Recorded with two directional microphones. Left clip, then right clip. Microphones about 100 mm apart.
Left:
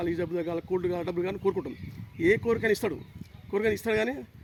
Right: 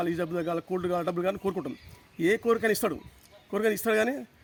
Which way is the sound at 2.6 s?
45° right (ahead or behind).